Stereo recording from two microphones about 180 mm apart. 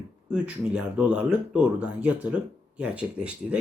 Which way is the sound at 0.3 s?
5° right (ahead or behind).